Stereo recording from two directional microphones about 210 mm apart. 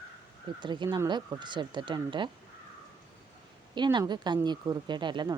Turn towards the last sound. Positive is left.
turn(degrees=-20)  # may be behind; listen again after turning